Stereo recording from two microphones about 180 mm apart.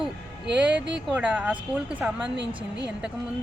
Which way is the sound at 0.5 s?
5° right (ahead or behind).